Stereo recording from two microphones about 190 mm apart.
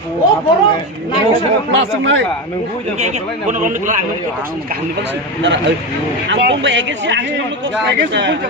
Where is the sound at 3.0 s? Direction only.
40° right (ahead or behind).